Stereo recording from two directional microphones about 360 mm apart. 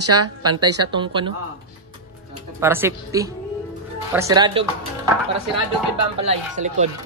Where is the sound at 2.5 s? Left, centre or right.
Centre.